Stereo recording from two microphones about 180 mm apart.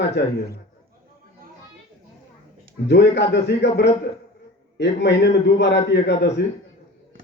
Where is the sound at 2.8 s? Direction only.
70° left (ahead or behind).